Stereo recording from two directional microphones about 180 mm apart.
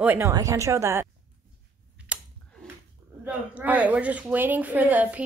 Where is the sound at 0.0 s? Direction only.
10° right (ahead or behind).